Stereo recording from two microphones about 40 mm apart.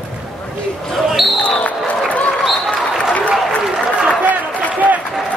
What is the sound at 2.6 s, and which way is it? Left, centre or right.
Applause, centre.